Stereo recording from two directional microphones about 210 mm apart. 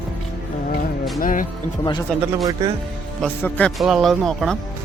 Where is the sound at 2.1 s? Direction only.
5° left (ahead or behind).